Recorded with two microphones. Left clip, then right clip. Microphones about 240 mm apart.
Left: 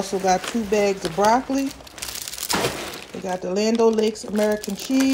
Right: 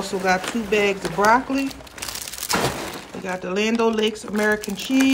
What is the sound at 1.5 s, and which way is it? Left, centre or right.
Crumpling, centre.